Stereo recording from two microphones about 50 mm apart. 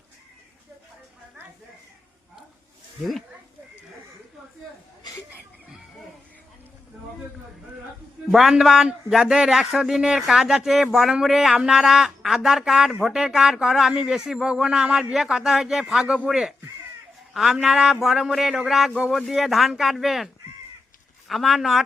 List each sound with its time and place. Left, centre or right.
3.0 s speech: centre
8.3 s speech: centre
15.1 s speech: centre
16.0 s speech: centre
16.3 s speech: centre